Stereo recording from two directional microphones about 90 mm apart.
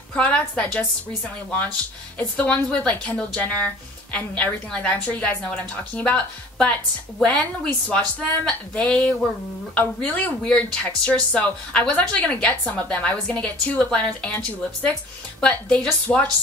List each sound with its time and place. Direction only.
0.1 s a woman's voice: 10° left (ahead or behind)
2.1 s a woman's voice: 15° left (ahead or behind)
7.2 s a woman's voice: 15° left (ahead or behind)
15.4 s a woman's voice: 10° left (ahead or behind)